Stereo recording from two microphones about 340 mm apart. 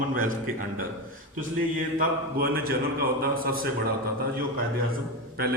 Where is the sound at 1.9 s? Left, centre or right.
Right.